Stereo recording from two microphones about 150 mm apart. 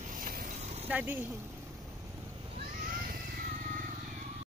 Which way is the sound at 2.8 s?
65° right (ahead or behind).